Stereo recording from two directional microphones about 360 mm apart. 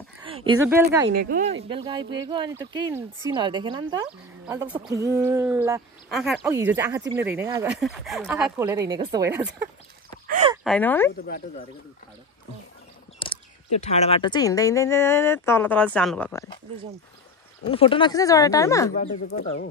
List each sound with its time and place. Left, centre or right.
0.5 s a woman's voice: centre
1.3 s a woman's voice: right; by 9.7 s centre
10.2 s a sound: right
10.5 s speech: centre
13.2 s speech: centre
17.6 s speech: centre
19.2 s speech: left